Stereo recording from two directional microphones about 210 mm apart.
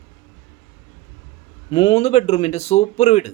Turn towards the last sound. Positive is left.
turn(degrees=35)  # may be behind; listen again after turning